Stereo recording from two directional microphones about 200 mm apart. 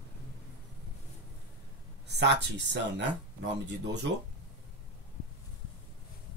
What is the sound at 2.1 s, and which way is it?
Speech, 60° right (ahead or behind).